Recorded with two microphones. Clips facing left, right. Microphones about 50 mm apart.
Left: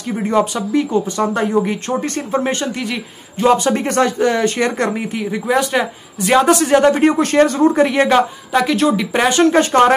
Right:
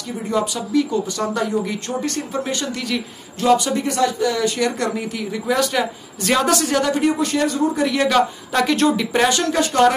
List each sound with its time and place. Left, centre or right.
0.1 s speech: left
8.5 s speech: centre
9.3 s speech: left